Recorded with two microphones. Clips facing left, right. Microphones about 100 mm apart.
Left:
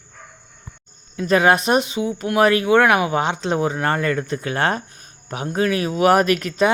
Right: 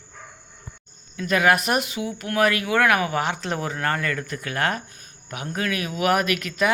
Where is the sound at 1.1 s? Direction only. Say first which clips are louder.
Left 4 dB; 30° left (ahead or behind).